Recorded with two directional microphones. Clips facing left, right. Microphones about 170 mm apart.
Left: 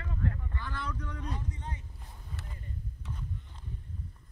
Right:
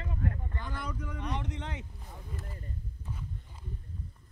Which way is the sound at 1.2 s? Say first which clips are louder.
Right 6 dB; 80° right.